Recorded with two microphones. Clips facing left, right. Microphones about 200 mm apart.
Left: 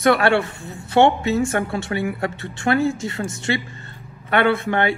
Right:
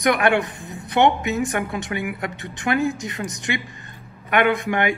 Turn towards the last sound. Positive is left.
turn(degrees=-15)  # may be behind; listen again after turning